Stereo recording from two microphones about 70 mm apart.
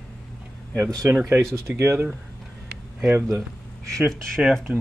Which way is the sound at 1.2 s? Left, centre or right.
Right.